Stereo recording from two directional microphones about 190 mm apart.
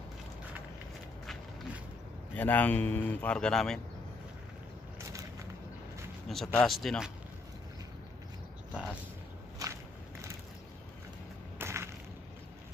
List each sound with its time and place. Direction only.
1.2 s walk: centre (ahead or behind)
2.3 s a man's voice: 10° left (ahead or behind)
6.2 s speech: centre (ahead or behind)
9.6 s walk: 20° right (ahead or behind)
11.5 s a sound: 15° right (ahead or behind)